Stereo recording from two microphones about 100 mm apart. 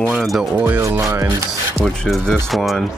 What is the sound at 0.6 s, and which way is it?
Speech, 25° right (ahead or behind).